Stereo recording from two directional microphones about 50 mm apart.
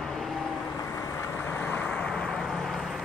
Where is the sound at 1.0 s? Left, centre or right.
Left.